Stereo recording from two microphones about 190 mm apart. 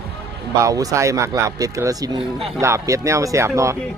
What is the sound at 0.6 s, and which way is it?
Speech, 20° right (ahead or behind).